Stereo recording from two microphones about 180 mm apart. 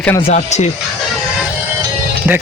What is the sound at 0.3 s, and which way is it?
Speech, 40° left (ahead or behind).